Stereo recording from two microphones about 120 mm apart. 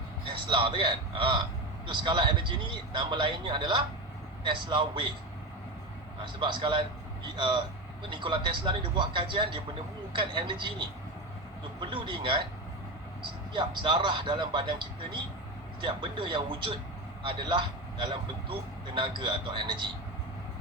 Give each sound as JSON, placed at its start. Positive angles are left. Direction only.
{"t": 0.3, "sound": "a man's voice", "side_deg": -45}
{"t": 6.2, "sound": "a man's voice", "side_deg": -40}
{"t": 13.5, "sound": "a man's voice", "side_deg": -45}